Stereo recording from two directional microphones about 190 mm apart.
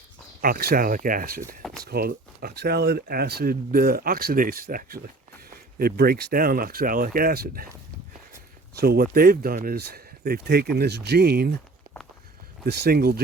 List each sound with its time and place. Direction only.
0.4 s speech: 55° right (ahead or behind)
8.7 s speech: 55° right (ahead or behind)
12.6 s speech: 55° right (ahead or behind)